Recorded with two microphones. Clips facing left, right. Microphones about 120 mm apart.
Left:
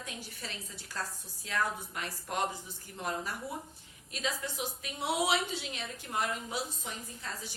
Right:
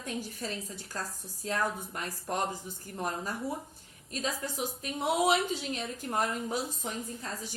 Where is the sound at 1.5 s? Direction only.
40° right (ahead or behind).